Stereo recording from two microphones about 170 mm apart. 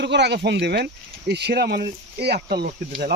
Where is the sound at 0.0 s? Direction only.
85° right.